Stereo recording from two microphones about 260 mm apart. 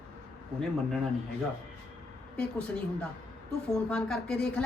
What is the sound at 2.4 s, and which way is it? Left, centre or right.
A woman's voice, centre.